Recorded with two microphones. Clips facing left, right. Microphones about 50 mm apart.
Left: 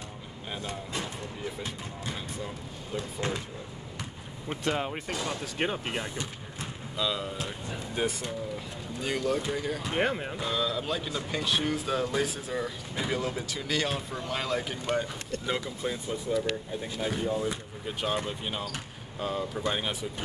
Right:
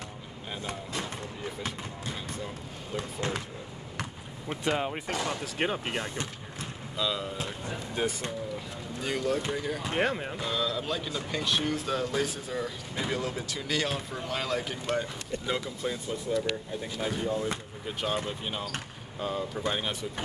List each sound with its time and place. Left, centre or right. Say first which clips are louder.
4.6 s speech: right 1 dB; centre
5.1 s speech: right 2 dB; right
5.6 s speech: even; centre
17.8 s speech: left 1 dB; centre